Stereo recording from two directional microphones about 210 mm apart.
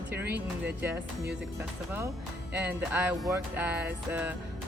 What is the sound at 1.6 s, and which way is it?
Music, 15° right (ahead or behind).